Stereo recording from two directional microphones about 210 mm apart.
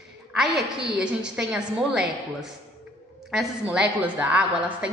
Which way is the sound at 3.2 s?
5° right (ahead or behind).